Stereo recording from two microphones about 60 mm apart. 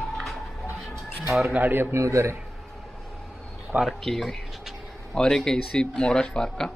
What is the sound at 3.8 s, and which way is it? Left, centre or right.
Speech, centre.